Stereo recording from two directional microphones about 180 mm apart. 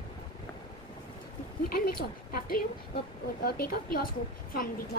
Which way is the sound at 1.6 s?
55° left (ahead or behind).